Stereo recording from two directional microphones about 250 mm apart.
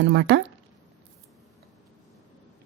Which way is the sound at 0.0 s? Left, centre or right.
Right.